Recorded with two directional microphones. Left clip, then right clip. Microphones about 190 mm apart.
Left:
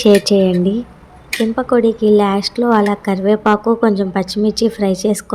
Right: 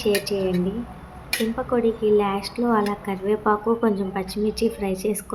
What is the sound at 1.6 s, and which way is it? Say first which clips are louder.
A woman's voice: left 10 dB; 30° left (ahead or behind).